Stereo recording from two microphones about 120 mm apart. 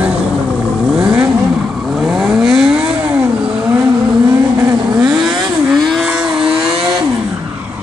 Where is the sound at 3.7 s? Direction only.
20° right (ahead or behind).